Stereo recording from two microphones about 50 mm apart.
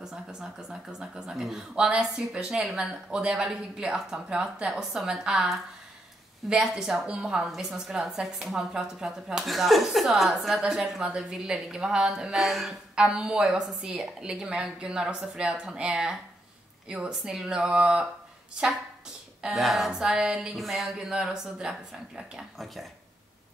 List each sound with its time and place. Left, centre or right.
0.0 s a woman's voice: centre
6.7 s a woman's voice: centre
12.9 s a woman's voice: centre
19.4 s speech: centre
19.9 s a woman's voice: centre
20.5 s speech: centre
21.0 s a woman's voice: centre